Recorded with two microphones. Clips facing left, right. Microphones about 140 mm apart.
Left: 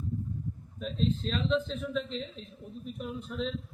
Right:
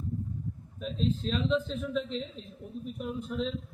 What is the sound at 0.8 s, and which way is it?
A man's voice, centre (ahead or behind).